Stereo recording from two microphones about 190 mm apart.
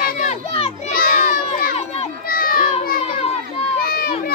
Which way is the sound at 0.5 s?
30° left (ahead or behind).